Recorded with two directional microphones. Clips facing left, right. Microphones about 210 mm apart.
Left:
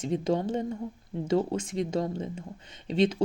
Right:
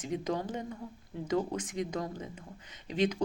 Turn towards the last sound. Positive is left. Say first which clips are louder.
# left 5 dB
turn(degrees=25)  # may be behind; listen again after turning